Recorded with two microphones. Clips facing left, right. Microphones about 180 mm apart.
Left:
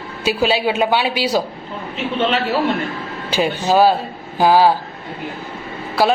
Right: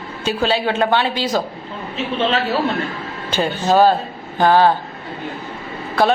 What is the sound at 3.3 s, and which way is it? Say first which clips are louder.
A woman's voice: even; 10° left (ahead or behind).